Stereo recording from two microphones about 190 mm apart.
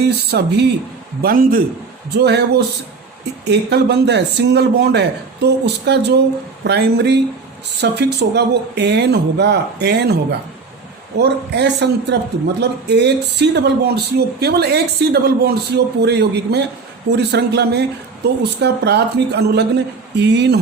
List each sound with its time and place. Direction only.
0.0 s a man's voice: 60° right (ahead or behind)
1.2 s a man's voice: 50° right (ahead or behind)
2.1 s a man's voice: 60° right (ahead or behind)
11.2 s a man's voice: 60° right (ahead or behind)